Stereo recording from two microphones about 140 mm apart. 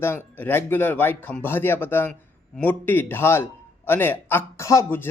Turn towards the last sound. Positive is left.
turn(degrees=20)  # may be behind; listen again after turning